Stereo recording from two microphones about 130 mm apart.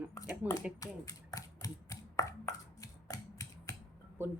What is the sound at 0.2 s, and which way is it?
Speech, 25° left (ahead or behind).